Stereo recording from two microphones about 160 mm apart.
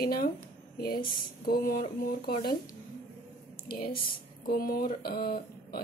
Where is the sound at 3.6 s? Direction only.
70° left (ahead or behind).